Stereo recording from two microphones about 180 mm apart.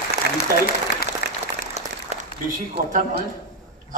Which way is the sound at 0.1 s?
55° left (ahead or behind).